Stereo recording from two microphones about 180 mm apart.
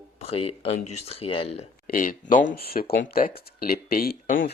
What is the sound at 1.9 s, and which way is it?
Speech, 50° left (ahead or behind).